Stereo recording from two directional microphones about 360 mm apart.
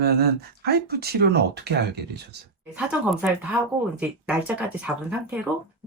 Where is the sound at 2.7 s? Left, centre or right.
Centre.